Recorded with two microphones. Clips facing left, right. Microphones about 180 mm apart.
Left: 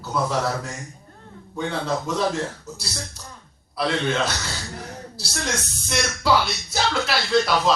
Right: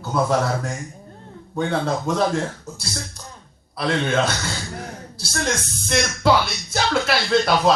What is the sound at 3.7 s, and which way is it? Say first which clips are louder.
Speech: right 1 dB; 50° right (ahead or behind).